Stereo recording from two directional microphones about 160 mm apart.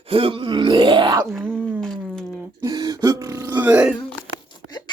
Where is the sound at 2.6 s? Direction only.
25° right (ahead or behind).